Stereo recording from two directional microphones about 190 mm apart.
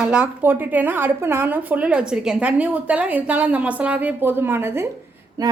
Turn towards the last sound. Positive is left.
turn(degrees=-20)  # may be behind; listen again after turning